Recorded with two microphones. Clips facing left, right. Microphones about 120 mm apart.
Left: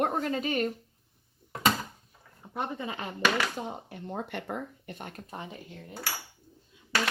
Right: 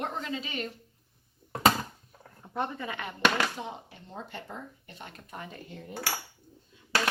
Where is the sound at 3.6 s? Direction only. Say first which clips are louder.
Left 2 dB; 50° left (ahead or behind).